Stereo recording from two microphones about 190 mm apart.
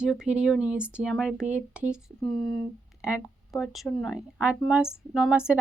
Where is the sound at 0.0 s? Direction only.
5° right (ahead or behind).